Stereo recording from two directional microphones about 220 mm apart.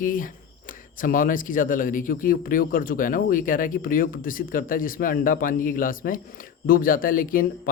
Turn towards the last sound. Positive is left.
turn(degrees=40)  # may be behind; listen again after turning